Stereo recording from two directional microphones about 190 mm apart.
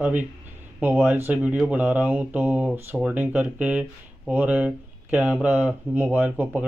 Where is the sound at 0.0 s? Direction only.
10° right (ahead or behind).